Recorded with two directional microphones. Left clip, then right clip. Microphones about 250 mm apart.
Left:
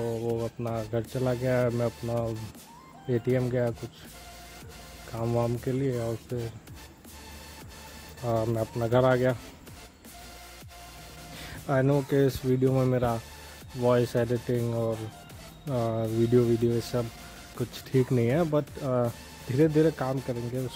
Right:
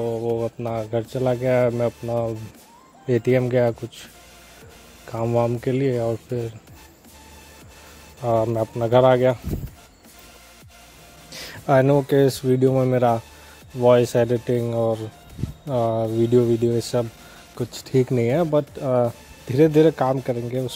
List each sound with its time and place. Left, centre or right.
0.0 s speech: centre
3.1 s speech: right
5.1 s speech: right
8.2 s speech: right
11.6 s speech: right